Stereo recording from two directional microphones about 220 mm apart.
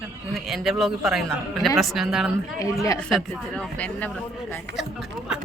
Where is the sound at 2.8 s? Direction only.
15° left (ahead or behind).